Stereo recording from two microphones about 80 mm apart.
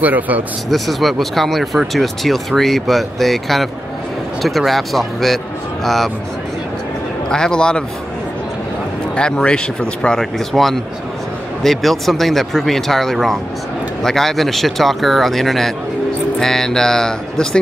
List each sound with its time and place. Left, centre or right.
0.0 s speech: right
0.7 s speech: centre
7.2 s speech: centre
9.1 s speech: centre